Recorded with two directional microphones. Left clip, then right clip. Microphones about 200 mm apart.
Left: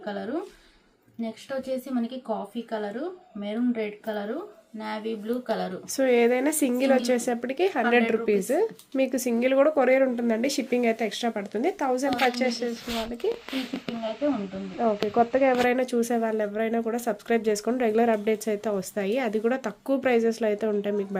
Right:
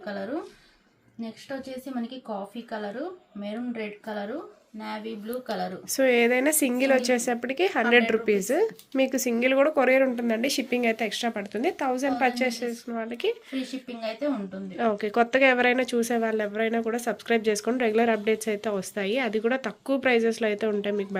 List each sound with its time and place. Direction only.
0.0 s a woman's voice: 10° right (ahead or behind)
3.4 s speech: 5° right (ahead or behind)
14.8 s speech: 20° right (ahead or behind)
15.6 s speech: centre (ahead or behind)